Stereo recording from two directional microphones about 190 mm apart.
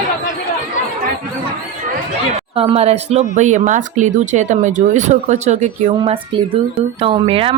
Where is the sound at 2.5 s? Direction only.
30° right (ahead or behind).